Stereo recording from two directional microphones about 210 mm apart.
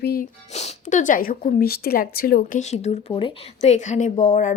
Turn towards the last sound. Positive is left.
turn(degrees=35)  # may be behind; listen again after turning